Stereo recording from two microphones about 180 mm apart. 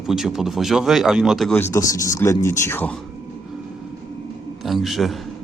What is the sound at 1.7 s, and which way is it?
Speech, 20° left (ahead or behind).